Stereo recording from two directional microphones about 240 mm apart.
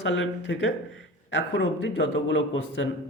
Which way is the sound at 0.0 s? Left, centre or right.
Left.